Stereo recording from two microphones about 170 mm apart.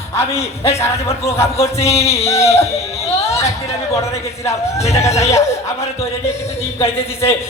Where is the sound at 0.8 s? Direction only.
15° left (ahead or behind).